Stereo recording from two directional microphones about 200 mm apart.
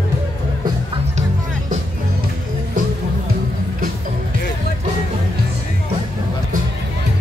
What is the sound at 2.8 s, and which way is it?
Music, 40° right (ahead or behind).